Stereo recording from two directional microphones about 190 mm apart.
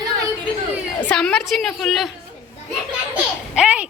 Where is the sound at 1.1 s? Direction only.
5° left (ahead or behind).